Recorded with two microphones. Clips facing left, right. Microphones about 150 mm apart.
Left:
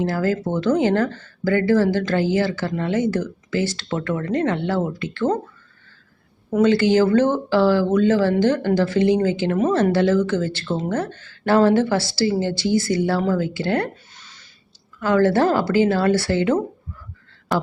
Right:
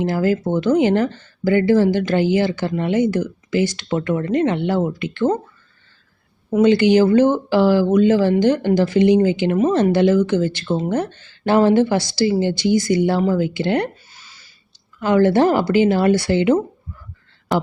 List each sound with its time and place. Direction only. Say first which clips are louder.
0.0 s speech: right 3 dB; 20° right (ahead or behind)
6.5 s speech: right 3 dB; 15° right (ahead or behind)
14.1 s a sound: even; 5° right (ahead or behind)
14.9 s speech: right 2 dB; 20° right (ahead or behind)